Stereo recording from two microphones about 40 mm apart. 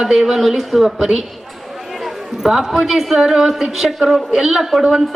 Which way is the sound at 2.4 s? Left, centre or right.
Centre.